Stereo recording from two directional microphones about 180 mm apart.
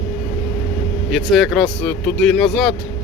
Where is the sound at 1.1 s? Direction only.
Centre (ahead or behind).